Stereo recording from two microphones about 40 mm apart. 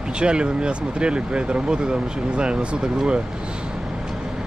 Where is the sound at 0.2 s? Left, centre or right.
Right.